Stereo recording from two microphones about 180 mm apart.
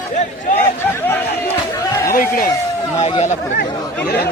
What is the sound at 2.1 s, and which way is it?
Speech, 50° left (ahead or behind).